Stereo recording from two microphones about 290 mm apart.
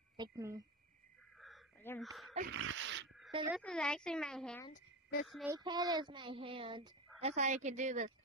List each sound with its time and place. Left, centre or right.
0.2 s child singing: centre
1.4 s a sound: centre
2.5 s dog: right
3.5 s speech: centre
4.6 s a sound: left
5.2 s child singing: centre
7.2 s a woman's voice: right